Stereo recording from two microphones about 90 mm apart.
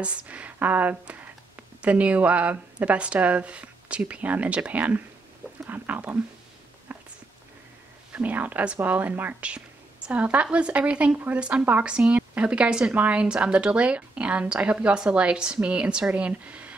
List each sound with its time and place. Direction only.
0.0 s speech: 15° right (ahead or behind)
6.9 s a sound: 20° right (ahead or behind)
8.1 s speech: 15° right (ahead or behind)